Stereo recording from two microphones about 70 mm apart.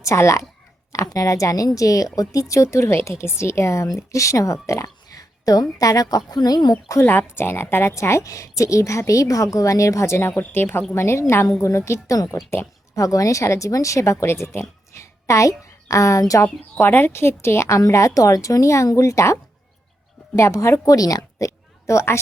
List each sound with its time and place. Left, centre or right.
0.0 s a woman's voice: left
7.0 s a woman's voice: left
12.1 s a woman's voice: left
15.3 s a woman's voice: left
16.8 s a woman's voice: left
17.7 s a woman's voice: left